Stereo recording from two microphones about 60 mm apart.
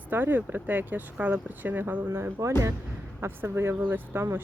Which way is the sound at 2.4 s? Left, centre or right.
Right.